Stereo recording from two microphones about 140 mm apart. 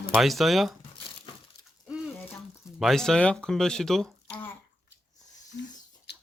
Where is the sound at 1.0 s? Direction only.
40° left (ahead or behind).